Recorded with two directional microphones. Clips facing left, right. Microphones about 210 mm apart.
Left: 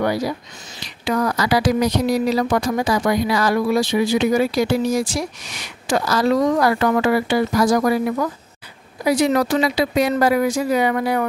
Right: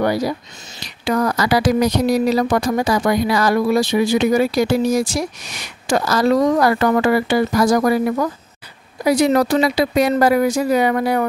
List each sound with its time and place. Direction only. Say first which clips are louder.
0.0 s speech: right 2 dB; 40° right (ahead or behind)